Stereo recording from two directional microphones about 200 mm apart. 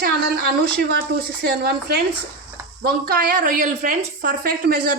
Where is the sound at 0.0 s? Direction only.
50° right (ahead or behind).